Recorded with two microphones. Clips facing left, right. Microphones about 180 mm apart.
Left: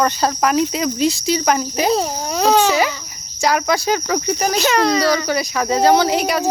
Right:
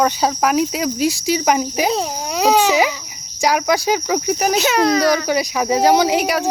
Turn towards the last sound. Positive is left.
turn(degrees=-10)  # may be behind; listen again after turning